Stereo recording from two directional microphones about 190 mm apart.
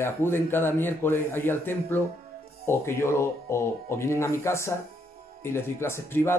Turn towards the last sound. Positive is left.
turn(degrees=15)  # may be behind; listen again after turning